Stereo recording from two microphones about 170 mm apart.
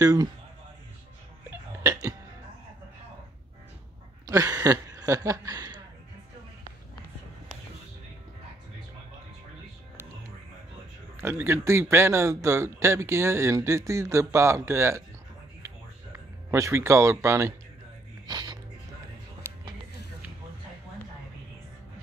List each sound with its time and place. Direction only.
0.0 s a man's voice: 20° right (ahead or behind)
1.8 s music: 15° right (ahead or behind)
4.3 s speech: 20° right (ahead or behind)
11.1 s speech: 15° right (ahead or behind)
16.4 s speech: 15° right (ahead or behind)
18.2 s music: 25° right (ahead or behind)